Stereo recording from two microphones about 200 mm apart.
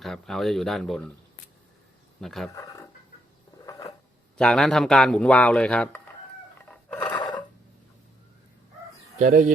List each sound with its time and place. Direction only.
0.0 s speech: centre (ahead or behind)
2.2 s speech: centre (ahead or behind)
2.6 s a sound: 15° left (ahead or behind)
4.4 s speech: 5° left (ahead or behind)
6.7 s chicken: 10° left (ahead or behind)
7.2 s a sound: 20° left (ahead or behind)
9.2 s speech: 40° right (ahead or behind)